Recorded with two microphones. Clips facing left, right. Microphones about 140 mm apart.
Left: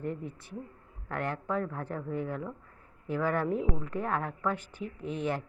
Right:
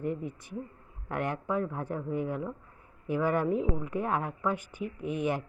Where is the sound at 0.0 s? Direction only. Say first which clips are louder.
Right 3 dB; 15° right (ahead or behind).